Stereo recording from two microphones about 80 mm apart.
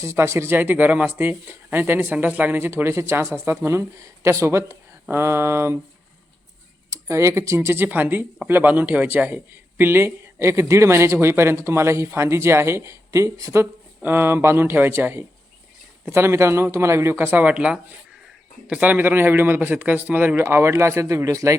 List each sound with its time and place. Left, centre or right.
0.0 s speech: right
6.9 s speech: right
13.6 s speech: right